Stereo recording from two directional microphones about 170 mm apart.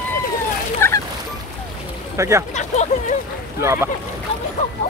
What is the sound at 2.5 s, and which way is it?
Speech, 45° left (ahead or behind).